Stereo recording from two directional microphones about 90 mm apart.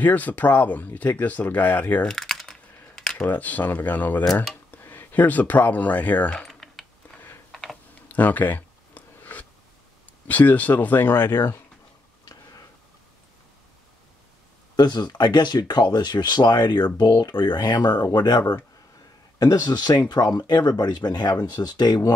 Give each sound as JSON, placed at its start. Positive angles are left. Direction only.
{"t": 0.0, "sound": "speech", "side_deg": 20}
{"t": 2.0, "sound": "typing", "side_deg": 5}
{"t": 3.0, "sound": "camera", "side_deg": 10}
{"t": 3.3, "sound": "speech", "side_deg": 20}
{"t": 6.4, "sound": "typing", "side_deg": 5}
{"t": 8.1, "sound": "a sound", "side_deg": 20}
{"t": 10.2, "sound": "speech", "side_deg": 20}
{"t": 14.8, "sound": "speech", "side_deg": 55}